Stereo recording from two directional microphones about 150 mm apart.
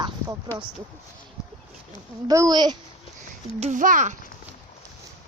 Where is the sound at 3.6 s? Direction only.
60° right (ahead or behind).